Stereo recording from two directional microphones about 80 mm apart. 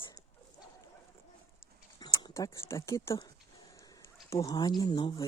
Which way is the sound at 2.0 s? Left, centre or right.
Left.